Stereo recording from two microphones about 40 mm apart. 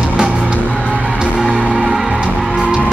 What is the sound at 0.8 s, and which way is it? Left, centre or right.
Music, right.